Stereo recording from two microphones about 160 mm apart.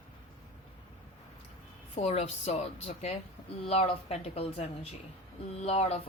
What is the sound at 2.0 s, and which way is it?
Speech, 40° left (ahead or behind).